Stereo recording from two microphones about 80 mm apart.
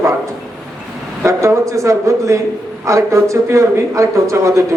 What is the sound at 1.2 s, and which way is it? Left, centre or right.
A woman's voice, right.